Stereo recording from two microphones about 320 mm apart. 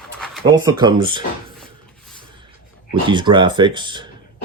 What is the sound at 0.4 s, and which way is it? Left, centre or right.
Speech, centre.